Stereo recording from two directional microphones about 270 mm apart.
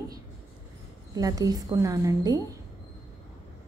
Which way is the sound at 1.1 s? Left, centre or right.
Centre.